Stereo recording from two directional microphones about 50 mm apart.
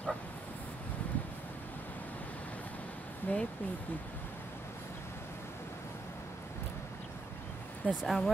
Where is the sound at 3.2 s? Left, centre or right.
Left.